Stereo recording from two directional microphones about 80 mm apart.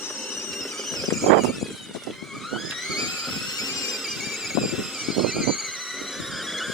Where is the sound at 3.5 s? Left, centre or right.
Left.